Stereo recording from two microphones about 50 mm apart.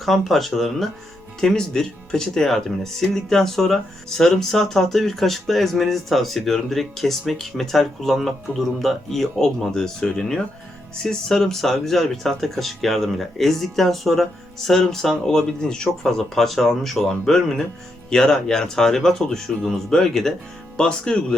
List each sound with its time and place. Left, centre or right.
0.0 s speech: centre